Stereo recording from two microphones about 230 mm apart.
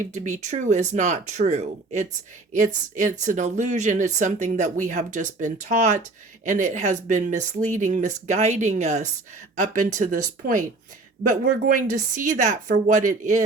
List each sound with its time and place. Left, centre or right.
0.1 s speech: right